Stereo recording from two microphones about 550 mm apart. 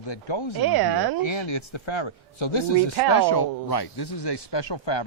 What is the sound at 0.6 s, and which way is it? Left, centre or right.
Speech, right.